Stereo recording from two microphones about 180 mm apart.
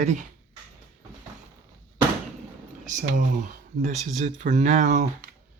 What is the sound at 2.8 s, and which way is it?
Speech, 45° right (ahead or behind).